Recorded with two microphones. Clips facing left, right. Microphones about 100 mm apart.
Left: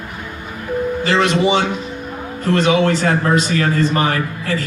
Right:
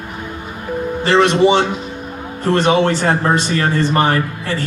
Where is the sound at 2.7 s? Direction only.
30° right (ahead or behind).